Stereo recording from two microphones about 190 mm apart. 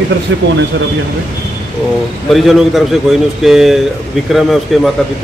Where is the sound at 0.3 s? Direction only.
75° right (ahead or behind).